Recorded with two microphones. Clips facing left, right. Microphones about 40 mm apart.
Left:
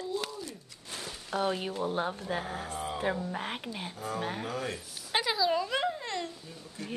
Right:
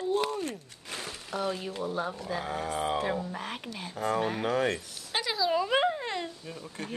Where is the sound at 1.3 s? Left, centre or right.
Left.